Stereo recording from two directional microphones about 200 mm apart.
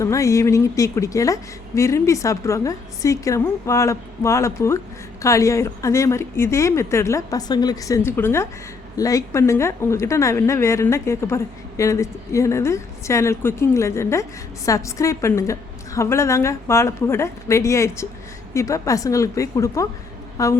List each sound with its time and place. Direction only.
0.0 s a woman's voice: 15° left (ahead or behind)